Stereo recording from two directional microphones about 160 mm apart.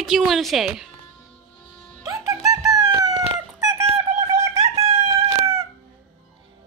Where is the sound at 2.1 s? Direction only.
20° right (ahead or behind).